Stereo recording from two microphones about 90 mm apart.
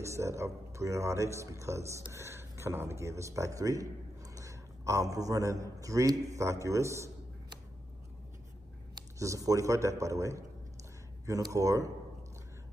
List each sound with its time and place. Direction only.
0.0 s a man's voice: 35° right (ahead or behind)
9.2 s a man's voice: 35° right (ahead or behind)